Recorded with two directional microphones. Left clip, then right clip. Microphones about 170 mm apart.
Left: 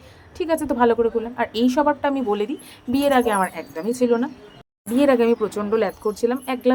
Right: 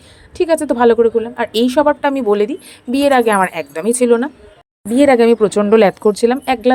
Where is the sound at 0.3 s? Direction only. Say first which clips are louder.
Right 7 dB; 35° right (ahead or behind).